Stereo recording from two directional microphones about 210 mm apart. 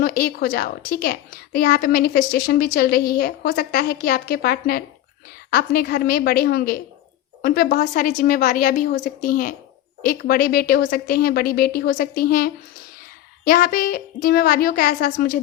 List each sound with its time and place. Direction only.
0.0 s a woman's voice: 45° left (ahead or behind)